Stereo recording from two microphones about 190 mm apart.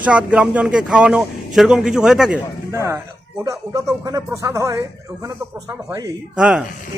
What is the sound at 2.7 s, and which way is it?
Speech, 15° right (ahead or behind).